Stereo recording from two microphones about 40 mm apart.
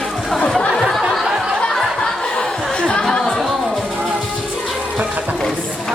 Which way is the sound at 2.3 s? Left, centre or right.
Left.